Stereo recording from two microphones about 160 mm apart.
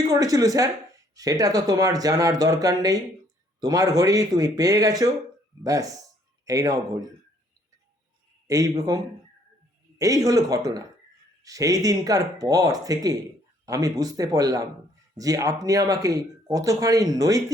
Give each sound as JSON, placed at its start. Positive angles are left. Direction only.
{"t": 0.1, "sound": "speech", "side_deg": -20}
{"t": 8.4, "sound": "speech", "side_deg": -20}
{"t": 10.0, "sound": "speech", "side_deg": -20}